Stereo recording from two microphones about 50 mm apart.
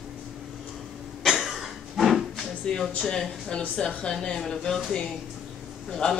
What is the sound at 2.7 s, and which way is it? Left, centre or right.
Speech, centre.